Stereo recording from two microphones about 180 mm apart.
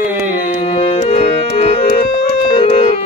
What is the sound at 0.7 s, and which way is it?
Music, 35° left (ahead or behind).